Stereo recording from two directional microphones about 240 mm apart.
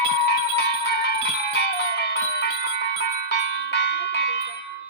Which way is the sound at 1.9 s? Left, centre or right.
Left.